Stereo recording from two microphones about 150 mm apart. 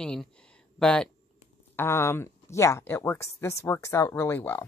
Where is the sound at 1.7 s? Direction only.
15° left (ahead or behind).